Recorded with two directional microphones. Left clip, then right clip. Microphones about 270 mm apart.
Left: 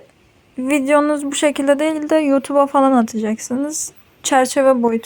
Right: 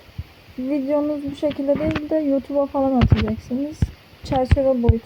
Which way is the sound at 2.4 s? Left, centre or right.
Left.